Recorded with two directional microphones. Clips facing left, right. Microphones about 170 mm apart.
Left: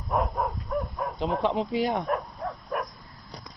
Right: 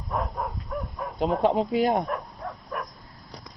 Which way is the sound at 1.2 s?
45° right (ahead or behind).